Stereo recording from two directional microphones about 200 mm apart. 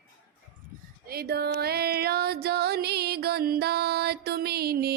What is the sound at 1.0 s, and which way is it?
Music, 50° right (ahead or behind).